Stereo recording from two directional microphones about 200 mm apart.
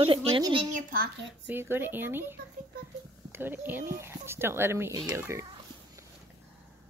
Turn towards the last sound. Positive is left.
turn(degrees=-15)  # may be behind; listen again after turning